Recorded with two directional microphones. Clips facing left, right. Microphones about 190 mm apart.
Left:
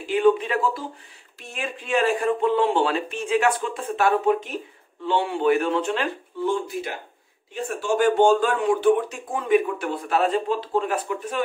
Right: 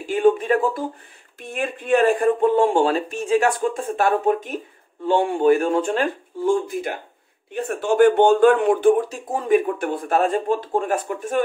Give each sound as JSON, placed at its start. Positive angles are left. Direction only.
{"t": 0.0, "sound": "a man's voice", "side_deg": -45}
{"t": 8.9, "sound": "speech", "side_deg": -40}